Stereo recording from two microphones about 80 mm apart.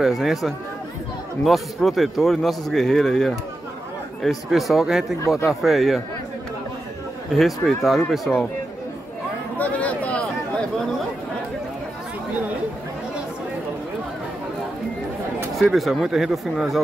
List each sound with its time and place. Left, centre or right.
0.0 s speech: centre
7.3 s speech: centre
9.6 s a sound: centre
15.5 s speech: centre